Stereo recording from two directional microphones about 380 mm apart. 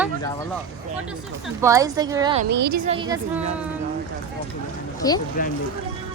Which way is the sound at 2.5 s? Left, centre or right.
Right.